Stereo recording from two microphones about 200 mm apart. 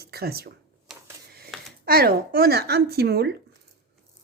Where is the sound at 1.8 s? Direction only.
50° right (ahead or behind).